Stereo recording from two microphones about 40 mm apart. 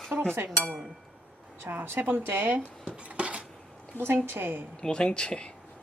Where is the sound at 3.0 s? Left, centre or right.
Right.